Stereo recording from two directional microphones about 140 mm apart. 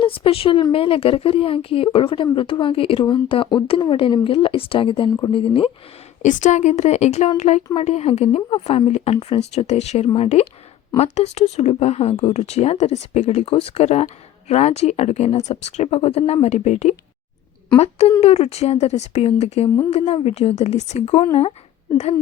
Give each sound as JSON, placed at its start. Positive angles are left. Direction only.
{"t": 0.0, "sound": "speech", "side_deg": 40}
{"t": 6.2, "sound": "speech", "side_deg": 60}